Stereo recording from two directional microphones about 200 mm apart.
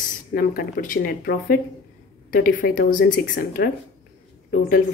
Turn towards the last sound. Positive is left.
turn(degrees=45)  # may be behind; listen again after turning